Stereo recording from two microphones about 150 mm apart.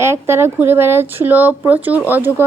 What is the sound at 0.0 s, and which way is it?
Speech, 15° right (ahead or behind).